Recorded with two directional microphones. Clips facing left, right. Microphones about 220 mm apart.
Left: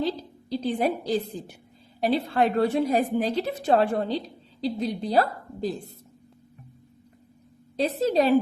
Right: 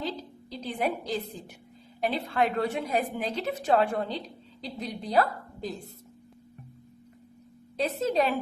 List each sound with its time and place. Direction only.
0.5 s a woman's voice: 35° left (ahead or behind)
7.8 s a woman's voice: 35° left (ahead or behind)